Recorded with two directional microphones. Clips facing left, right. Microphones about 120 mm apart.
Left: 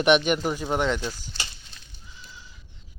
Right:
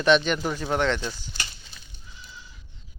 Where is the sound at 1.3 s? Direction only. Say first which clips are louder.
Even; centre (ahead or behind).